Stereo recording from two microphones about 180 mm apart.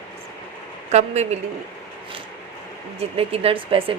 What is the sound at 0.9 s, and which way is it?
Speech, 40° right (ahead or behind).